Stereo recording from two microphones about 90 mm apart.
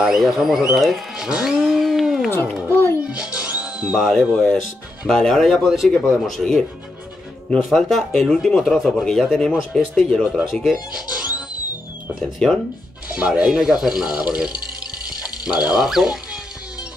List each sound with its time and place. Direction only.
0.0 s speech: centre (ahead or behind)
2.7 s music: 25° left (ahead or behind)
3.1 s music: 10° right (ahead or behind)
3.8 s speech: centre (ahead or behind)
12.4 s speech: 10° left (ahead or behind)
13.1 s speech: 10° right (ahead or behind)